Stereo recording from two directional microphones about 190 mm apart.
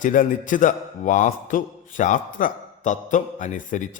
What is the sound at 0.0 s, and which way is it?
A man's voice, 45° left (ahead or behind).